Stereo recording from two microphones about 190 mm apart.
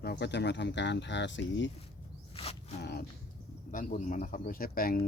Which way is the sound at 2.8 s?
60° left (ahead or behind).